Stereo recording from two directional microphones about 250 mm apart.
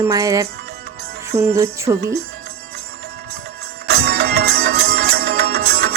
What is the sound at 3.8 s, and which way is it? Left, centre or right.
Music, right.